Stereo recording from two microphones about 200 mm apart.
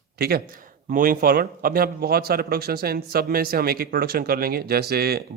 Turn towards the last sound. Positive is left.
turn(degrees=-50)  # may be behind; listen again after turning